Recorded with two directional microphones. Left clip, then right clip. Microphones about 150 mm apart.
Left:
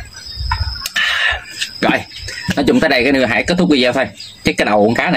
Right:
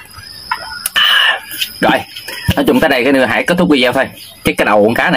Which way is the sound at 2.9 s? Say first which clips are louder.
Right 2 dB; 20° left (ahead or behind).